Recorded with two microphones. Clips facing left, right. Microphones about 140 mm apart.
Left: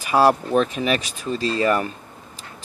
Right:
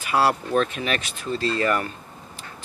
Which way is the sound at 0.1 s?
15° left (ahead or behind).